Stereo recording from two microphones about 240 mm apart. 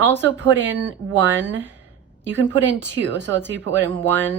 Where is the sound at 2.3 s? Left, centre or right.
Right.